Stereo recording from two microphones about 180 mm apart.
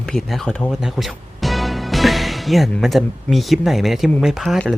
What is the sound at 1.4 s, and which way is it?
Speech, centre (ahead or behind).